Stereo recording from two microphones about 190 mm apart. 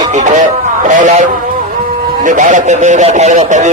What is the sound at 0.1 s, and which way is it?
A man's voice, 40° right (ahead or behind).